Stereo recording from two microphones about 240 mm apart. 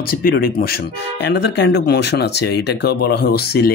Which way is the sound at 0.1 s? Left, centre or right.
Left.